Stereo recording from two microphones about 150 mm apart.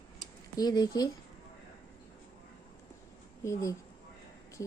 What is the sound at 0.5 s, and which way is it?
Speech, 25° left (ahead or behind).